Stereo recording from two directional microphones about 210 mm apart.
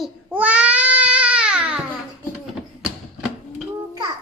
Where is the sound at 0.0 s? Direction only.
5° right (ahead or behind).